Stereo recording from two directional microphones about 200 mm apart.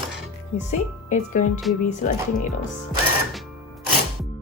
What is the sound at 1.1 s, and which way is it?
Speech, 40° left (ahead or behind).